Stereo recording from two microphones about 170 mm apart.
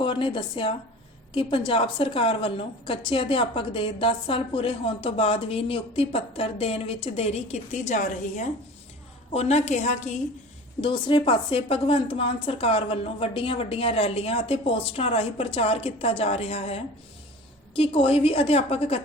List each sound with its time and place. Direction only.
0.0 s a woman's voice: 30° left (ahead or behind)
10.8 s a woman's voice: 30° left (ahead or behind)